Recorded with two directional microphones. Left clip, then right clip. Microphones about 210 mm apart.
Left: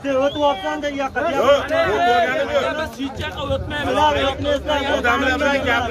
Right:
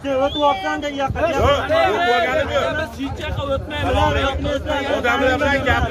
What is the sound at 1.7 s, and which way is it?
Speech, 50° right (ahead or behind).